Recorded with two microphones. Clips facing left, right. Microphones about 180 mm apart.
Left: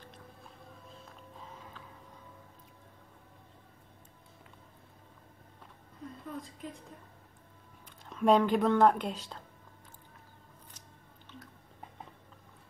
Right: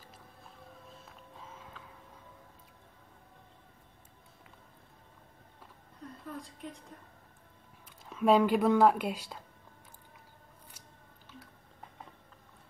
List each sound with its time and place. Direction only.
1.0 s a sound: centre (ahead or behind)
6.2 s a woman's voice: centre (ahead or behind)
8.1 s a woman's voice: 5° right (ahead or behind)